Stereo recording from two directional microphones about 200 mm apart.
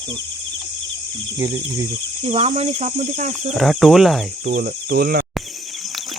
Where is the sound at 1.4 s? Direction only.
15° right (ahead or behind); by 3.5 s 35° right (ahead or behind).